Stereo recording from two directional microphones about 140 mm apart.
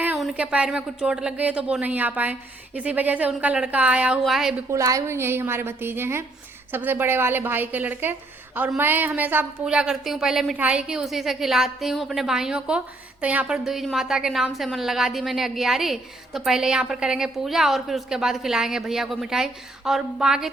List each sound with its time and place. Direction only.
0.2 s a woman's voice: 5° right (ahead or behind)
4.7 s a woman's voice: 20° right (ahead or behind); by 20.5 s 5° right (ahead or behind)